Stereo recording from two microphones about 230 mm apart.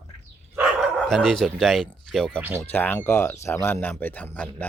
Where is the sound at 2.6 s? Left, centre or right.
Centre.